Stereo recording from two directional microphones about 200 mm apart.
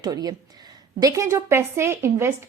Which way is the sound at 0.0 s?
20° right (ahead or behind).